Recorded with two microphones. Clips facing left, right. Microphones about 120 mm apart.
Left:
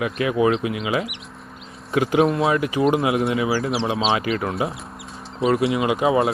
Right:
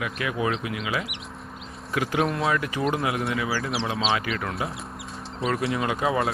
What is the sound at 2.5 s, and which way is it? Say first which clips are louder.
Speech: left 6 dB; 20° left (ahead or behind).